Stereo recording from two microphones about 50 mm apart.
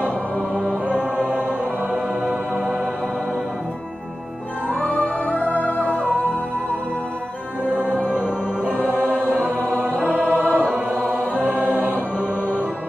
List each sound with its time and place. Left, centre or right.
1.1 s music: right
4.7 s music: left
8.7 s music: right
11.5 s choir: right